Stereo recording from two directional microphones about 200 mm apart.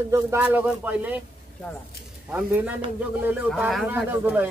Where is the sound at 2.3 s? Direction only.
5° right (ahead or behind).